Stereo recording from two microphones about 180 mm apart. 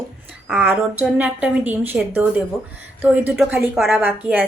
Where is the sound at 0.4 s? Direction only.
10° right (ahead or behind).